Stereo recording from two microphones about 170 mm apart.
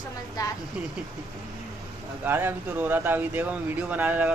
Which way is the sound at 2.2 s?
10° right (ahead or behind).